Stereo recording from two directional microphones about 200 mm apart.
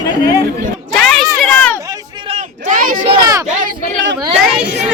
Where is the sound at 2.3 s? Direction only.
40° right (ahead or behind).